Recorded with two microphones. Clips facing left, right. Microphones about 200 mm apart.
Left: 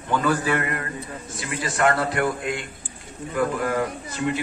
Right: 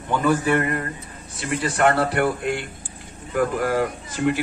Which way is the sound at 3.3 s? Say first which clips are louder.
Right 2 dB; 55° right (ahead or behind).